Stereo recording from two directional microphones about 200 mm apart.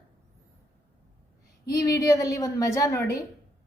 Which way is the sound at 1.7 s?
15° left (ahead or behind).